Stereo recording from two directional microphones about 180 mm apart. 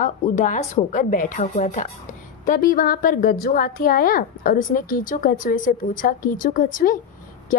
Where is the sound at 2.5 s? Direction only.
55° left (ahead or behind).